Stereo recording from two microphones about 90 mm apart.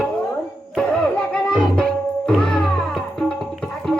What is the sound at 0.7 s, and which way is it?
Music, 10° left (ahead or behind).